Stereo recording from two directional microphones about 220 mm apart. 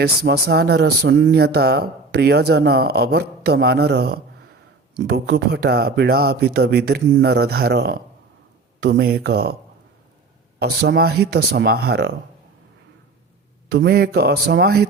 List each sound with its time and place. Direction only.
0.0 s speech: 45° right (ahead or behind)
10.6 s speech: 45° right (ahead or behind)
13.7 s speech: 50° right (ahead or behind)